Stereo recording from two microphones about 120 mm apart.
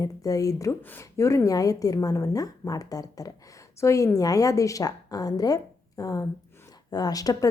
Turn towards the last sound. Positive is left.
turn(degrees=30)  # may be behind; listen again after turning